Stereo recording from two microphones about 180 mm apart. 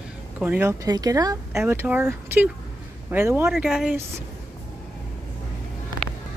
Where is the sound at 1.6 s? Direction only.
10° right (ahead or behind).